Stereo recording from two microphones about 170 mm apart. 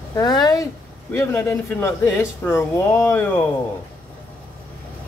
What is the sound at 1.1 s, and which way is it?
Speech, 15° left (ahead or behind).